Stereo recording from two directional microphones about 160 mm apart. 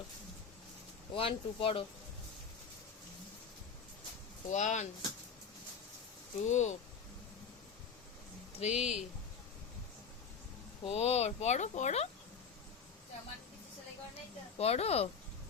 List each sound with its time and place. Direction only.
1.1 s speech: 35° left (ahead or behind)
4.4 s speech: 50° left (ahead or behind)
6.5 s speech: 45° left (ahead or behind)
8.5 s speech: 40° left (ahead or behind)
10.8 s speech: 40° left (ahead or behind)
14.6 s speech: 40° left (ahead or behind)